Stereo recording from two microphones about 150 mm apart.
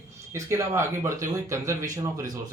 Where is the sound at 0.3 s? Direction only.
20° right (ahead or behind).